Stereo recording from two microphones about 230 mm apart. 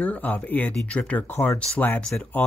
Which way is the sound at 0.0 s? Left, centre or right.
Centre.